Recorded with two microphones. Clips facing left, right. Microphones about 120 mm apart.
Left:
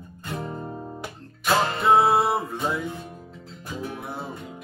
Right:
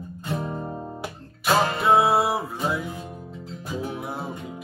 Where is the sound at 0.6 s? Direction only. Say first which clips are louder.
Right 2 dB; 20° right (ahead or behind).